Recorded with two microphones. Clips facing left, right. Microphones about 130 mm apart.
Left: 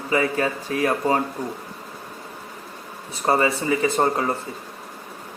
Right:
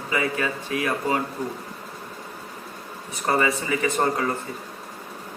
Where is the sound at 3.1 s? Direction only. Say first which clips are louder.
Left 2 dB; 30° left (ahead or behind).